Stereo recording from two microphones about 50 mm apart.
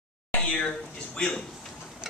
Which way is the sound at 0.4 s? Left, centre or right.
Left.